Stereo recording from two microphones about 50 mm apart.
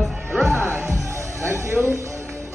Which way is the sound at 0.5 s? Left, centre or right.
Right.